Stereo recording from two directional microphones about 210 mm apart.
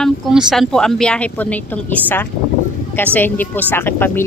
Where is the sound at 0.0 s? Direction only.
Centre (ahead or behind).